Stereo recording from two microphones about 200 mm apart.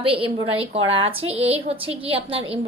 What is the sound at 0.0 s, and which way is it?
A woman's voice, 30° right (ahead or behind).